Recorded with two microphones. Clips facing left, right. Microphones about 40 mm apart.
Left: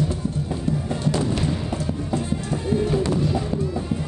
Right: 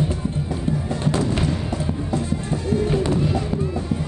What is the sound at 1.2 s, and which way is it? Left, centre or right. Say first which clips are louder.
Music: right 1 dB; right.